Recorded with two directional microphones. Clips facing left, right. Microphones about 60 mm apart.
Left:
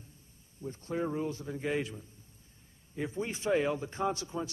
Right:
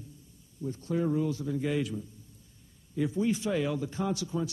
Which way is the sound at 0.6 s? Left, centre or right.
Left.